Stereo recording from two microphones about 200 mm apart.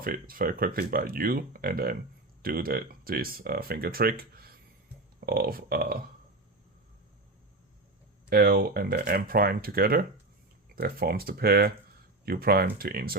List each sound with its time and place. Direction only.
0.0 s speech: 45° right (ahead or behind)
8.3 s speech: 45° right (ahead or behind)